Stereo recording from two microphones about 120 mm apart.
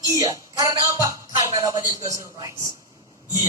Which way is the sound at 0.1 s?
30° right (ahead or behind).